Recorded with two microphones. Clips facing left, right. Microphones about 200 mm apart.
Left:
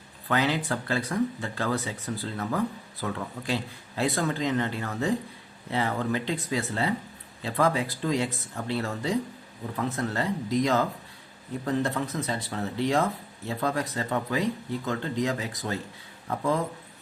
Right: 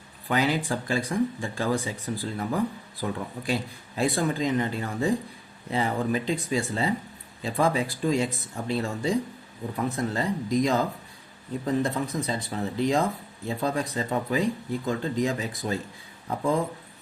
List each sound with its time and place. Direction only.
0.3 s speech: 10° right (ahead or behind)